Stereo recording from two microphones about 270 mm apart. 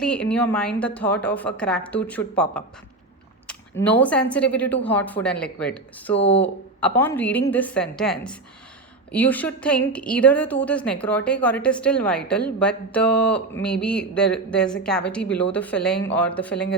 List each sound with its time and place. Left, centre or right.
0.0 s speech: centre
6.1 s speech: left
6.7 s speech: centre